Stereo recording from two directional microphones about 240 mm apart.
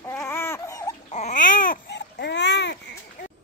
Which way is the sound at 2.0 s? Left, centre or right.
Left.